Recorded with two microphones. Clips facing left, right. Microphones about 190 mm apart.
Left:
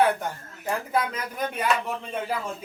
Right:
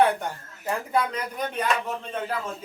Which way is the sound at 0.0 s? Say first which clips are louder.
Right 1 dB; centre (ahead or behind).